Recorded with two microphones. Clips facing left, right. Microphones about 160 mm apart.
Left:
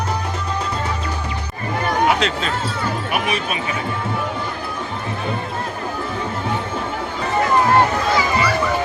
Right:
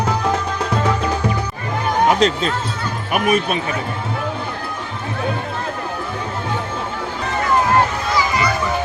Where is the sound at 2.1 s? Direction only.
40° right (ahead or behind).